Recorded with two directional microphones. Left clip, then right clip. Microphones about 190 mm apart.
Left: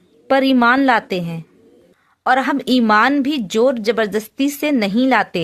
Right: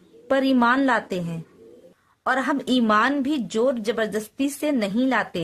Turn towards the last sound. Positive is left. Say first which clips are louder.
# left 7 dB
turn(degrees=30)  # may be behind; listen again after turning